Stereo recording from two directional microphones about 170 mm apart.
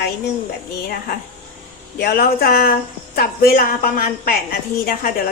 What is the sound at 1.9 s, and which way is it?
A woman's voice, 65° left (ahead or behind).